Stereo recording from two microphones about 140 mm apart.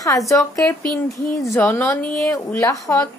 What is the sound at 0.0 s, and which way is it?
A woman's voice, 25° left (ahead or behind).